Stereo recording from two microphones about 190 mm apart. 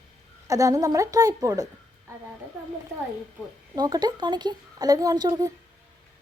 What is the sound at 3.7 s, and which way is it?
A woman's voice, 20° right (ahead or behind).